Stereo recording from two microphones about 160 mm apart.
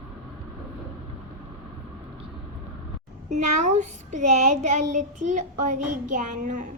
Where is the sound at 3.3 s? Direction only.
45° right (ahead or behind).